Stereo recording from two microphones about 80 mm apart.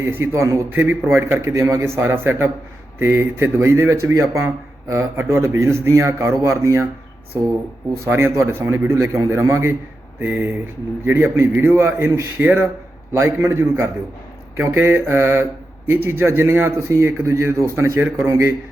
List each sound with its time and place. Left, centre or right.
0.0 s a man's voice: right
0.7 s a man's voice: right
8.0 s a man's voice: right
10.2 s a man's voice: right
13.1 s a man's voice: right